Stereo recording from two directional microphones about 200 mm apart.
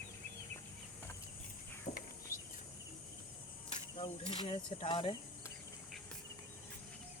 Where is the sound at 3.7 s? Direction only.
30° left (ahead or behind).